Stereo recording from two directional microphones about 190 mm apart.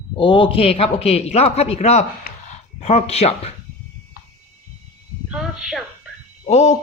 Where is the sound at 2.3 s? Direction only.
55° left (ahead or behind).